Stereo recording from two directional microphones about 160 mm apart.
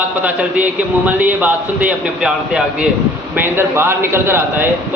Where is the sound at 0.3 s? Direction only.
10° right (ahead or behind).